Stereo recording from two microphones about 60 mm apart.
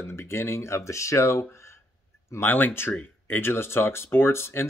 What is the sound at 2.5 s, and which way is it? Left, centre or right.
Speech, left.